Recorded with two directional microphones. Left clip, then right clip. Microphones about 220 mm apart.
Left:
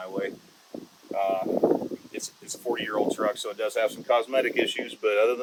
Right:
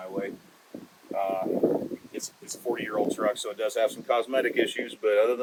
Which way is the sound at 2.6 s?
20° left (ahead or behind).